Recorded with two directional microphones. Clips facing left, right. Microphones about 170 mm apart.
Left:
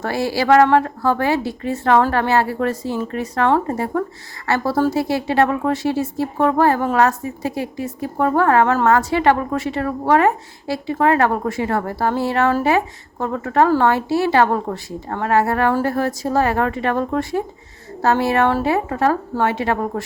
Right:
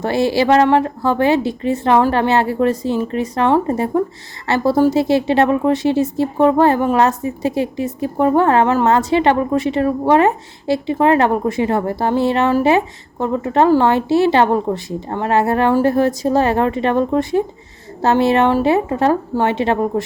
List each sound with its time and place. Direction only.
0.0 s speech: 20° right (ahead or behind)